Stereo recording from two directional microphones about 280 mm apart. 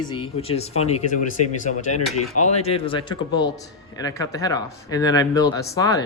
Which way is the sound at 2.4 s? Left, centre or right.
Left.